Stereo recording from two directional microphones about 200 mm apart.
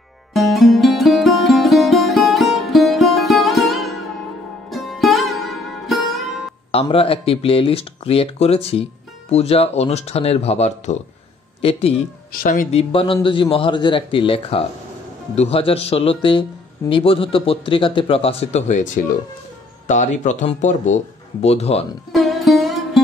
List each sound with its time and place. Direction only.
0.3 s music: centre (ahead or behind)
6.7 s speech: 25° left (ahead or behind)
12.3 s speech: 45° left (ahead or behind)
12.7 s speech: 25° left (ahead or behind)
19.9 s speech: 35° left (ahead or behind)
22.1 s music: centre (ahead or behind)